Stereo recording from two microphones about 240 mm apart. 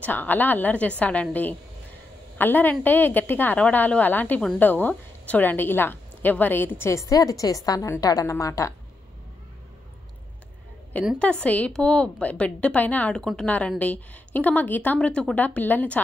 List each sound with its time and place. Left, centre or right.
0.0 s a woman's voice: centre
10.9 s a woman's voice: centre